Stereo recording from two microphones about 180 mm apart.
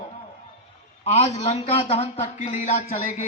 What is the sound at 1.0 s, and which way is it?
A man's voice, 35° left (ahead or behind).